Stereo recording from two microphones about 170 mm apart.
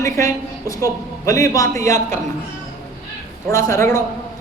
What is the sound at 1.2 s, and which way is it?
Speech, 20° left (ahead or behind).